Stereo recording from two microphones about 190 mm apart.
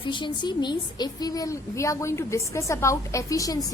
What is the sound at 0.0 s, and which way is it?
A woman's voice, 25° left (ahead or behind).